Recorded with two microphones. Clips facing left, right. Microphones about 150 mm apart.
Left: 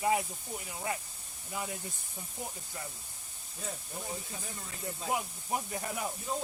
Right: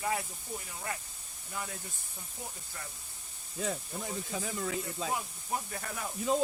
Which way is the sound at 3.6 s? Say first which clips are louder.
Right 5 dB; 90° right.